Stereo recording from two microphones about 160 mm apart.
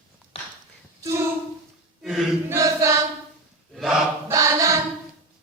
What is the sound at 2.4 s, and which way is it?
Chant, 20° right (ahead or behind).